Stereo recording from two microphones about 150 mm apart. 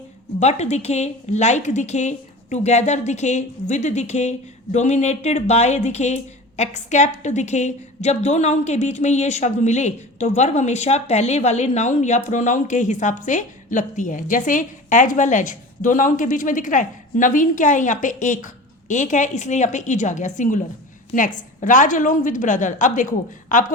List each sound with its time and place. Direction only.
0.3 s a woman's voice: 45° left (ahead or behind)